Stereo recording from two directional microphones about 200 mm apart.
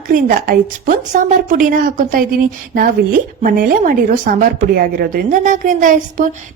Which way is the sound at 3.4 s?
45° right (ahead or behind).